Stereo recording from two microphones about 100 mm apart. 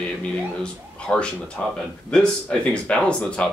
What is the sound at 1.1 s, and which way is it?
Speech, 20° left (ahead or behind).